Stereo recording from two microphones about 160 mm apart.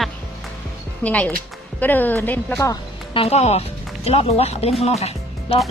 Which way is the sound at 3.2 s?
40° left (ahead or behind).